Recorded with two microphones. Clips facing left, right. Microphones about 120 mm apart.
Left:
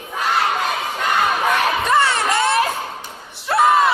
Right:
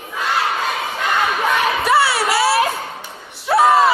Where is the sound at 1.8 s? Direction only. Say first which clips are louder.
Right 3 dB; 10° right (ahead or behind).